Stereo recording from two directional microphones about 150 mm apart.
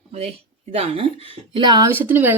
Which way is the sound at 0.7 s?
40° right (ahead or behind).